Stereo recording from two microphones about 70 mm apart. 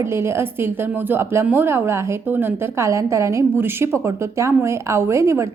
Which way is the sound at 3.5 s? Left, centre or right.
Right.